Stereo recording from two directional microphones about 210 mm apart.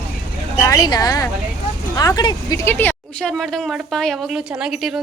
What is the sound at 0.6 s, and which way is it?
A woman's voice, 15° left (ahead or behind).